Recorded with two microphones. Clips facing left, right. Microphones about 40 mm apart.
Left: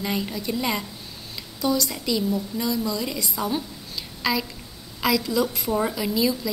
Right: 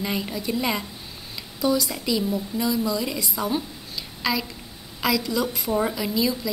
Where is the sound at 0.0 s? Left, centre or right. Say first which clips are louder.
Even; centre.